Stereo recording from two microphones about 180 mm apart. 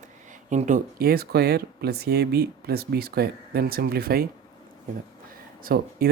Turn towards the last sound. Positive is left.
turn(degrees=-55)  # may be behind; listen again after turning